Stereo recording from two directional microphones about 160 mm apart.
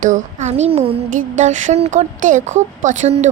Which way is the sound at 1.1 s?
50° right (ahead or behind).